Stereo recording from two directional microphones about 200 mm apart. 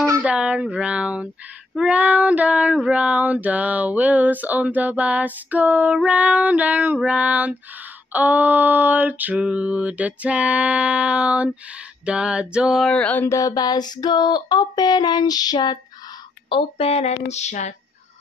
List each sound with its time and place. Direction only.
0.0 s speech: 10° right (ahead or behind)
1.8 s child singing: 5° right (ahead or behind)
12.0 s a sound: 5° right (ahead or behind); by 15.8 s 20° left (ahead or behind)
16.4 s speech: 25° left (ahead or behind)